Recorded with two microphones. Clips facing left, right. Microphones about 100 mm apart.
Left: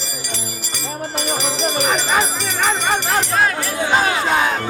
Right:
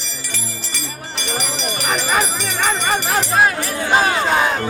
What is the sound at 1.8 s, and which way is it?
Music, centre (ahead or behind).